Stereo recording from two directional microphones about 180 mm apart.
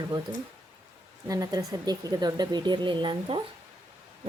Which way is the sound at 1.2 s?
20° right (ahead or behind).